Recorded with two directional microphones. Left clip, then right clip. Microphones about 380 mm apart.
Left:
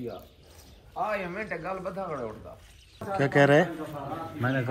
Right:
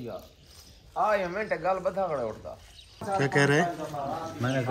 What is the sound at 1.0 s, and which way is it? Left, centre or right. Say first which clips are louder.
A man's voice: right 5 dB; right.